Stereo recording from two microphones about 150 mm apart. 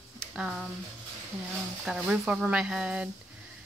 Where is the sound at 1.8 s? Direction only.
Centre (ahead or behind).